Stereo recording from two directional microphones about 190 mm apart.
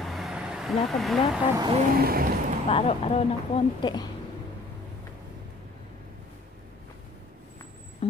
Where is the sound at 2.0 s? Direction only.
50° right (ahead or behind).